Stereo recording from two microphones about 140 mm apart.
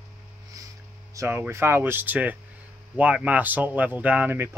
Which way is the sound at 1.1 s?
15° right (ahead or behind).